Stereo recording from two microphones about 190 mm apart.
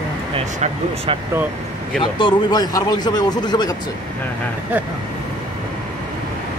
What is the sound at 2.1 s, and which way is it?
Speech, 20° left (ahead or behind).